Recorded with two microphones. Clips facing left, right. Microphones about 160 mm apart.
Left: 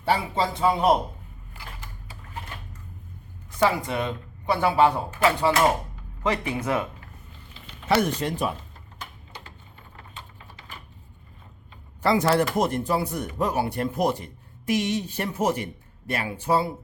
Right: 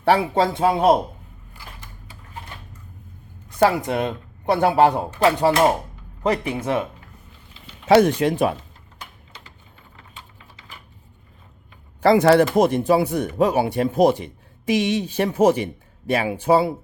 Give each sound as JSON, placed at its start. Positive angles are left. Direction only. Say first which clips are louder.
{"t": 0.0, "sound": "speech", "louder": "right 6 dB", "side_deg": -70}
{"t": 3.6, "sound": "speech", "louder": "right 5 dB", "side_deg": -50}
{"t": 5.2, "sound": "speech", "louder": "right 4 dB", "side_deg": -40}
{"t": 7.9, "sound": "a man's voice", "louder": "right 8 dB", "side_deg": -90}
{"t": 12.1, "sound": "speech", "louder": "right 7 dB", "side_deg": -70}
{"t": 12.6, "sound": "a man's voice", "louder": "right 7 dB", "side_deg": -85}